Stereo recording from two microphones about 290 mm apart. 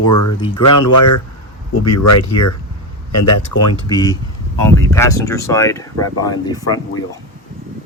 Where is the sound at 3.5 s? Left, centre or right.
Left.